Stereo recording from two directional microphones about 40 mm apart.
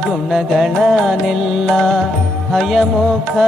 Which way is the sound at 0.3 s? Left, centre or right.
Centre.